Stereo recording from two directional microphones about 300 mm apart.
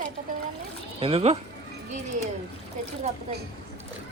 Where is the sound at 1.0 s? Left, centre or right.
Centre.